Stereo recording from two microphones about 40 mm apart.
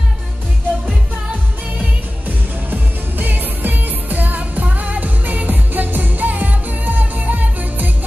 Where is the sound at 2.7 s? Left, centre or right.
Right.